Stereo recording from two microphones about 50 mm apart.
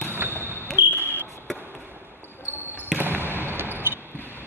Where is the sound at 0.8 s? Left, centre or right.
Right.